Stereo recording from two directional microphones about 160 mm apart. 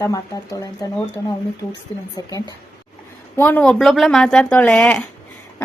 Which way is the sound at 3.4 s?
10° left (ahead or behind).